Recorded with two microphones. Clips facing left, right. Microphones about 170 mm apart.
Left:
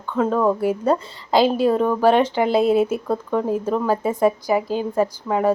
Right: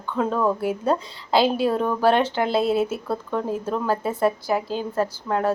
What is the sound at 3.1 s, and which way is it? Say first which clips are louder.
A woman's voice: left 4 dB; 5° left (ahead or behind).